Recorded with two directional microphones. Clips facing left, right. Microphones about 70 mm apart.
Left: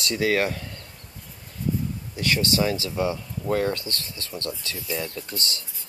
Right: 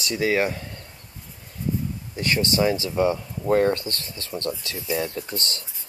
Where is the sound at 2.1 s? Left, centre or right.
Right.